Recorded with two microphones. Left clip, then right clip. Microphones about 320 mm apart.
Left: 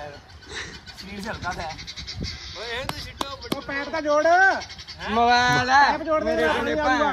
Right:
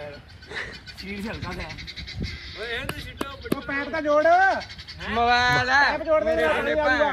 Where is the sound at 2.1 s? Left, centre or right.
Centre.